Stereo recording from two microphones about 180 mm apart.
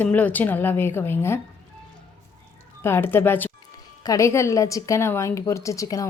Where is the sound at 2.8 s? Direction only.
15° left (ahead or behind).